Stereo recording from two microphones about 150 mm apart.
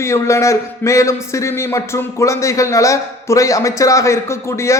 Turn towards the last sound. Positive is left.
turn(degrees=20)  # may be behind; listen again after turning